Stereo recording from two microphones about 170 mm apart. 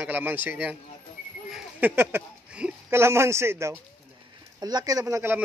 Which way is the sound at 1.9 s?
15° right (ahead or behind).